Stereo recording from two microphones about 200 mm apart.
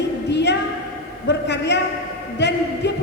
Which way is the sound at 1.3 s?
60° left (ahead or behind).